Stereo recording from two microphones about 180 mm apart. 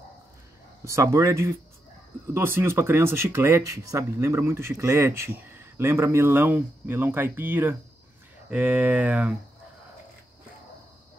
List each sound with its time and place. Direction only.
0.8 s speech: 15° right (ahead or behind)